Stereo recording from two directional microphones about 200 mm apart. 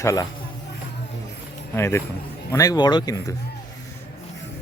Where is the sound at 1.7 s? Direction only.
10° left (ahead or behind).